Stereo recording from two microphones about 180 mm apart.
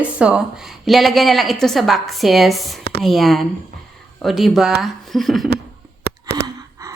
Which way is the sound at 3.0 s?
Centre (ahead or behind).